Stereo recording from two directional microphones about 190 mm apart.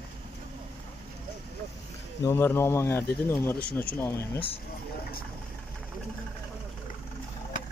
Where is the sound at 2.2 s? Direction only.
15° left (ahead or behind).